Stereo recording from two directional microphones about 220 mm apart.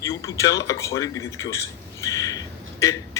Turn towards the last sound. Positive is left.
turn(degrees=15)  # may be behind; listen again after turning